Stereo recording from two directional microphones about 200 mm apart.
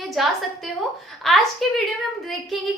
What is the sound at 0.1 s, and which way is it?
Child singing, centre (ahead or behind).